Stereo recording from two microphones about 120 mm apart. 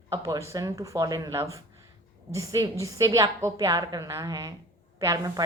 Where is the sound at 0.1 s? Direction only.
30° right (ahead or behind).